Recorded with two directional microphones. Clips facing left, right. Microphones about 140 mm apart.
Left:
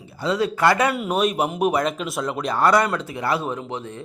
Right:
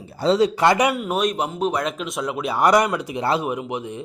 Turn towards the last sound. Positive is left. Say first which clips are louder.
# right 3 dB
turn(degrees=-15)  # may be behind; listen again after turning